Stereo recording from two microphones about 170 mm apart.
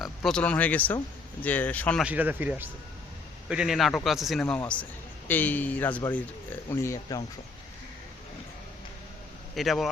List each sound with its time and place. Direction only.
0.0 s speech: 5° left (ahead or behind)
2.0 s a man's voice: 10° right (ahead or behind); by 7.2 s 15° left (ahead or behind)
9.6 s a man's voice: centre (ahead or behind)